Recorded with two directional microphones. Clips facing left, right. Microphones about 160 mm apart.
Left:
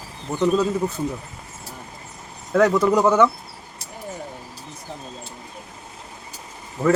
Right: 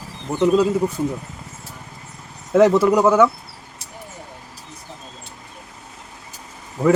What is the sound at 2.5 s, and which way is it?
Speech, 25° right (ahead or behind).